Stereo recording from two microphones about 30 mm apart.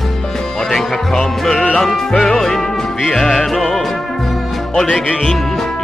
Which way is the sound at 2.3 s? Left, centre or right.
Centre.